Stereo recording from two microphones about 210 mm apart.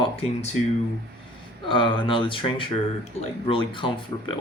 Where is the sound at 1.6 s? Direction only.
25° left (ahead or behind).